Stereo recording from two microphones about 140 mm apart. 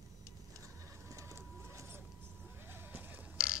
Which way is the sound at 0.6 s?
20° right (ahead or behind).